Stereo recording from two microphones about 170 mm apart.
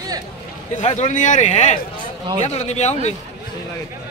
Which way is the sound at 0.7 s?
40° left (ahead or behind).